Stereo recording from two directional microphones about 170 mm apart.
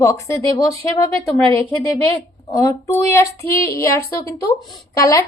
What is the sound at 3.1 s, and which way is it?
A woman's voice, 15° left (ahead or behind).